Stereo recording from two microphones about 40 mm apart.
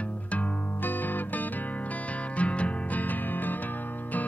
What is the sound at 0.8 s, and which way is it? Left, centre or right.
Music, left.